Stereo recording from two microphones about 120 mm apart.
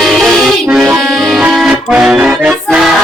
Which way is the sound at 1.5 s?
5° right (ahead or behind).